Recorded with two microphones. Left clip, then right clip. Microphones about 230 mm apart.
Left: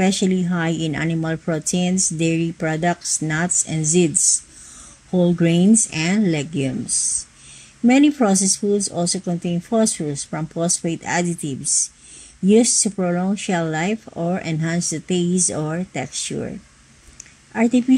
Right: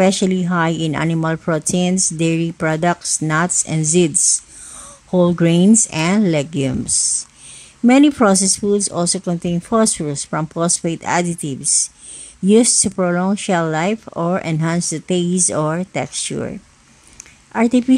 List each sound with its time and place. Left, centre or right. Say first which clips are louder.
0.0 s speech: right 5 dB; right
5.1 s speech: right 4 dB; right